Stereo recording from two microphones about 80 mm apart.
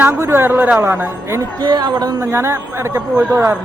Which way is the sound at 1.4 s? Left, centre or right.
Right.